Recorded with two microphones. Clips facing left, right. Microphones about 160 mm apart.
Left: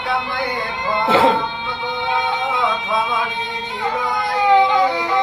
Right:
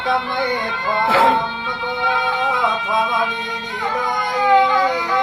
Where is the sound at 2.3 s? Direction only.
20° left (ahead or behind).